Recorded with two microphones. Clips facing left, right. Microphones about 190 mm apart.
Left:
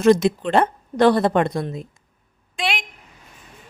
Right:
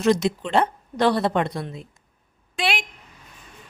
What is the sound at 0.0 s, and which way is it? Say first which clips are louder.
A woman's voice: left 5 dB; 50° left (ahead or behind).